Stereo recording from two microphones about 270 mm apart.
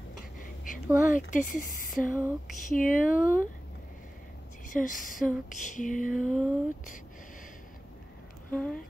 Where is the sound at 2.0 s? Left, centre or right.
Centre.